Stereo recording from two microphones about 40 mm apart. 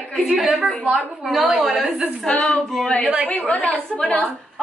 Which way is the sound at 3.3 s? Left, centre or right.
Left.